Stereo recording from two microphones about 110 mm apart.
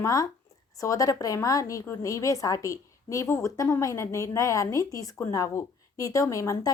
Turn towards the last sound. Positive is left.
turn(degrees=30)  # may be behind; listen again after turning